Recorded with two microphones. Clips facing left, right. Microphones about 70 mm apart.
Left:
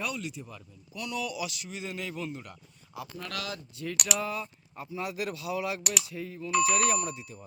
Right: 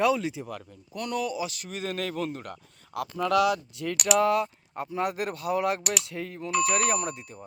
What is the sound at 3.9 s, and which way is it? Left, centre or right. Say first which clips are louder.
Speech: right 9 dB; centre.